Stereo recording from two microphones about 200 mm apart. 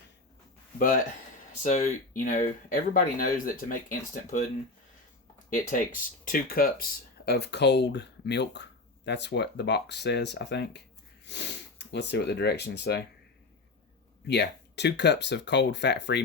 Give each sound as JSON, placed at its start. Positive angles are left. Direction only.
{"t": 1.6, "sound": "speech", "side_deg": 35}
{"t": 5.7, "sound": "speech", "side_deg": 45}
{"t": 14.3, "sound": "speech", "side_deg": 55}